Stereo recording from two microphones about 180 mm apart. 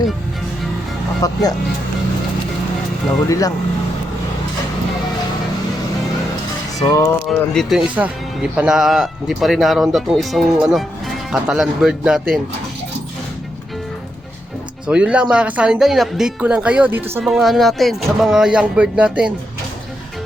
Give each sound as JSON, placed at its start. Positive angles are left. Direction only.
{"t": 1.2, "sound": "speech", "side_deg": 20}
{"t": 3.2, "sound": "speech", "side_deg": 20}
{"t": 7.3, "sound": "speech", "side_deg": 0}
{"t": 14.8, "sound": "speech", "side_deg": -5}